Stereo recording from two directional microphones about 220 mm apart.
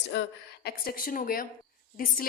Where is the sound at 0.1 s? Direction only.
55° left (ahead or behind).